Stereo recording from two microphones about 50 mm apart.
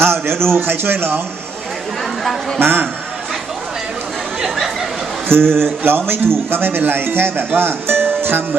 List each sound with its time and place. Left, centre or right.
0.0 s speech: right
2.6 s a man's voice: right
4.4 s a sound: centre
5.3 s speech: right